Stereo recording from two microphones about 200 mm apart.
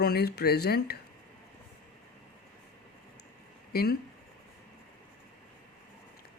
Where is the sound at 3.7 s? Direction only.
50° left (ahead or behind).